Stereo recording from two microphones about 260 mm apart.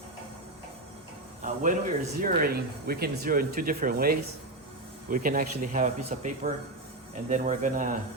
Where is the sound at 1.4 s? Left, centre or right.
Right.